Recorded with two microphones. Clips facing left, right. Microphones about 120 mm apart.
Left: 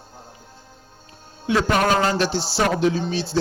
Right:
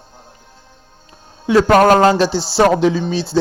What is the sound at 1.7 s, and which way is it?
Speech, 75° right (ahead or behind).